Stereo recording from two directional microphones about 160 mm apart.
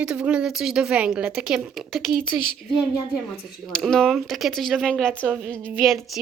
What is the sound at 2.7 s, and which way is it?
Speech, 25° left (ahead or behind).